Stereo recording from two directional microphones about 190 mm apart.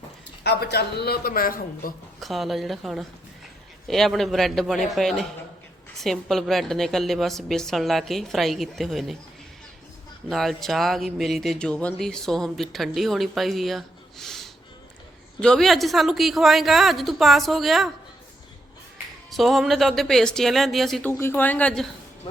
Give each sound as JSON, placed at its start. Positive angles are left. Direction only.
{"t": 0.4, "sound": "a woman's voice", "side_deg": 60}
{"t": 2.2, "sound": "speech", "side_deg": 0}
{"t": 10.2, "sound": "speech", "side_deg": 0}
{"t": 19.3, "sound": "speech", "side_deg": 0}
{"t": 21.1, "sound": "speech", "side_deg": 10}